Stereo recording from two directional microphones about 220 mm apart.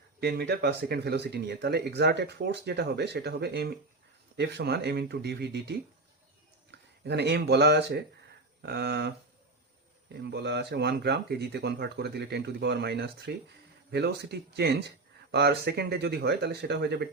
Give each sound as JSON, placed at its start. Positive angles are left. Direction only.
{"t": 0.2, "sound": "speech", "side_deg": -45}
{"t": 10.3, "sound": "speech", "side_deg": -50}